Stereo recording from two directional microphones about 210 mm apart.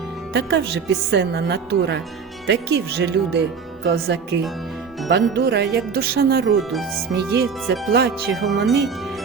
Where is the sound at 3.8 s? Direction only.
50° right (ahead or behind).